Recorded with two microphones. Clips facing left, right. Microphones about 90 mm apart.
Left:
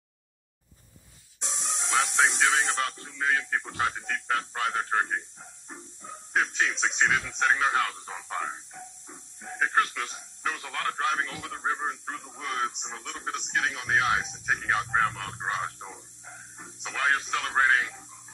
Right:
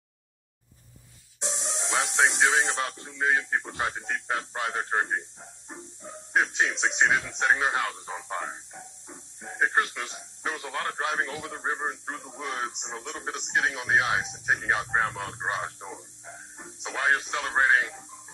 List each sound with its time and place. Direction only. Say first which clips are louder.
1.4 s speech: right 2 dB; 25° right (ahead or behind)
6.3 s speech: right 2 dB; 20° right (ahead or behind)